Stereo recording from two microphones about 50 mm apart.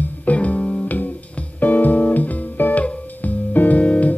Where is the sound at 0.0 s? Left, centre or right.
Left.